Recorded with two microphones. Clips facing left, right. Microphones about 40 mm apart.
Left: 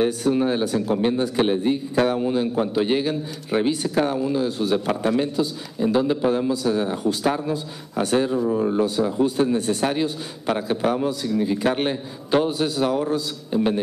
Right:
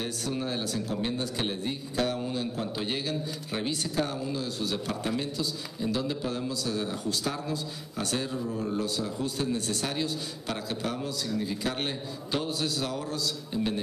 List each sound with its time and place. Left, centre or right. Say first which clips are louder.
0.0 s a man's voice: left 12 dB; left